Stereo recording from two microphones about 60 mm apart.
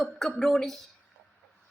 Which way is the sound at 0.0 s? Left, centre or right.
Centre.